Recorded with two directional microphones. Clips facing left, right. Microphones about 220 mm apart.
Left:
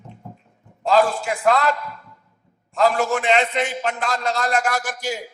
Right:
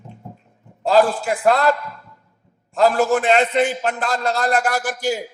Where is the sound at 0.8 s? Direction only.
35° right (ahead or behind).